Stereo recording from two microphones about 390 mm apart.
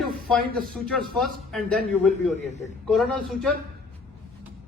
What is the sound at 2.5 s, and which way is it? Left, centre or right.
Speech, centre.